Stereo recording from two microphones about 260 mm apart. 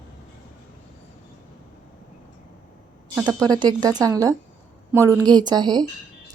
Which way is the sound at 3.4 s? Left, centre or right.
Centre.